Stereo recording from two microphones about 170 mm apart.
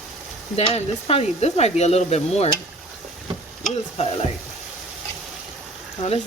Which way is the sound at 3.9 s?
40° left (ahead or behind).